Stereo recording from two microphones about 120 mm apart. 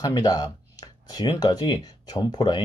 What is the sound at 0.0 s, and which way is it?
Speech, 35° left (ahead or behind).